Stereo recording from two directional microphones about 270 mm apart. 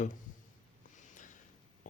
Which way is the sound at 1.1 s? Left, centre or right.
Left.